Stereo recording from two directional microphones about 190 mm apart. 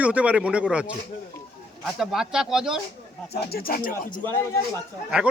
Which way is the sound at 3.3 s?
55° left (ahead or behind).